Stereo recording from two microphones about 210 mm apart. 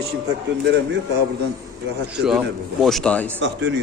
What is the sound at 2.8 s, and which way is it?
Speech, centre (ahead or behind).